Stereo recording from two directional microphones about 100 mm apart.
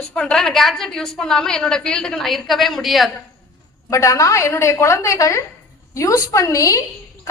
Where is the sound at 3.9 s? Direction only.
30° left (ahead or behind).